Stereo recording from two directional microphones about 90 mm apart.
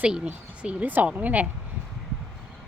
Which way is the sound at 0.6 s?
15° right (ahead or behind).